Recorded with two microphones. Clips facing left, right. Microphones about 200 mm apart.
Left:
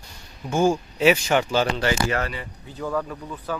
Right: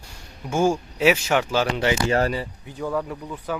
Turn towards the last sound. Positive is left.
turn(degrees=-15)  # may be behind; listen again after turning